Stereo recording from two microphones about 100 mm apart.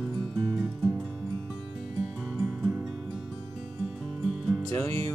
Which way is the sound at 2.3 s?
5° right (ahead or behind).